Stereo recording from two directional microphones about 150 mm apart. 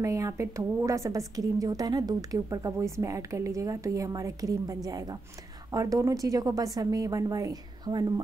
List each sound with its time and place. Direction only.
0.0 s a woman's voice: 20° right (ahead or behind)